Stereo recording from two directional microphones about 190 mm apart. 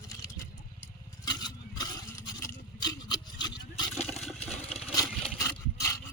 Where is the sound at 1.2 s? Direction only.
20° left (ahead or behind).